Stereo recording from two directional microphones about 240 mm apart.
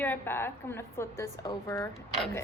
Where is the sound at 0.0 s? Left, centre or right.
Centre.